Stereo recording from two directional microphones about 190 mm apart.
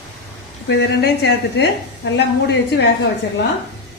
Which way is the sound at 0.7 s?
60° left (ahead or behind).